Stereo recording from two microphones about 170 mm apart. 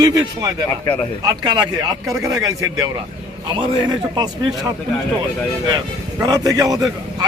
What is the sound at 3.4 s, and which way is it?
A man's voice, 25° right (ahead or behind).